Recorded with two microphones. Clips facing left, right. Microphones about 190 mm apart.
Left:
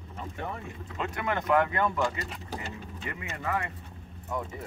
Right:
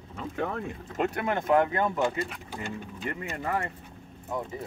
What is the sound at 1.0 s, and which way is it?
Speech, 35° right (ahead or behind).